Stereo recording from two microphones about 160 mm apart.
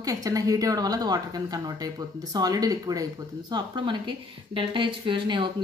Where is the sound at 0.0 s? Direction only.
20° right (ahead or behind).